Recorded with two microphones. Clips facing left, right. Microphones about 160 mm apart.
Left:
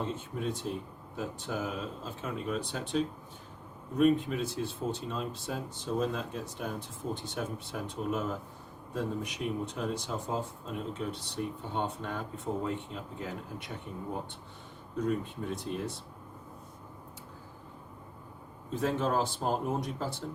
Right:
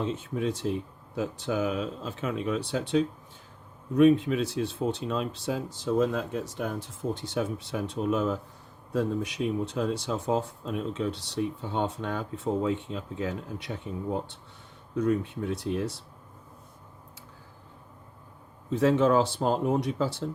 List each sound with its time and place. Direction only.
0.0 s speech: 90° right
15.0 s speech: 80° right
18.7 s speech: 80° right